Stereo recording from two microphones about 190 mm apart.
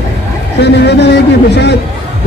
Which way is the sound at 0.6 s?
65° left (ahead or behind).